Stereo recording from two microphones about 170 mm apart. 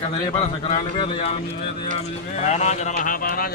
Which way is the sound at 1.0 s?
40° left (ahead or behind).